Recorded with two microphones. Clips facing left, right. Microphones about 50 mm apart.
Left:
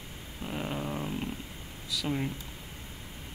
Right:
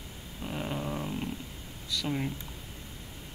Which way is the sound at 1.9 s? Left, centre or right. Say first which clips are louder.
Even; centre.